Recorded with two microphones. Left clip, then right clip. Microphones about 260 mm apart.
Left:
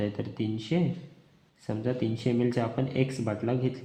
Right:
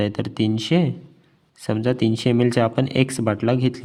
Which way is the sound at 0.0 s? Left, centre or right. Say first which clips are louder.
Right 9 dB; right.